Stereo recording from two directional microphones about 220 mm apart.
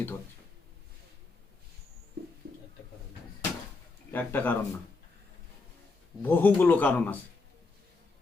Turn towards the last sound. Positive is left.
turn(degrees=5)  # may be behind; listen again after turning